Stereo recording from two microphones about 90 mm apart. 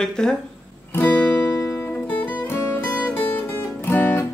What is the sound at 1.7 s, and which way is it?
Music, 25° left (ahead or behind).